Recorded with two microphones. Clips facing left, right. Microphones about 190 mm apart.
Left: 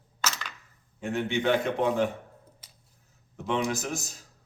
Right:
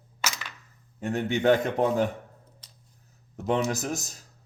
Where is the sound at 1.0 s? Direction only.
40° right (ahead or behind).